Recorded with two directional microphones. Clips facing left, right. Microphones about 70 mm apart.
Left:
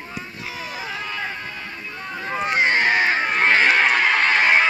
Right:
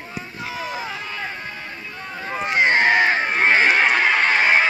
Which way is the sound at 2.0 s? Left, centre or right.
Centre.